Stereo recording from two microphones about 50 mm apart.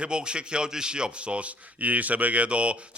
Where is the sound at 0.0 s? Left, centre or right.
Centre.